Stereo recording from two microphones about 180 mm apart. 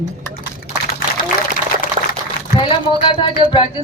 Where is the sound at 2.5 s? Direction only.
30° left (ahead or behind).